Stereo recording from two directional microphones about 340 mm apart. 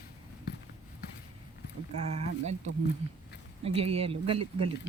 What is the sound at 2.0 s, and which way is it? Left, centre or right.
Speech, centre.